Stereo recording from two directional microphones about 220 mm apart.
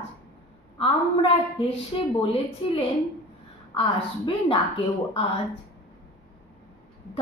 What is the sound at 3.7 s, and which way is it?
Speech, 25° left (ahead or behind).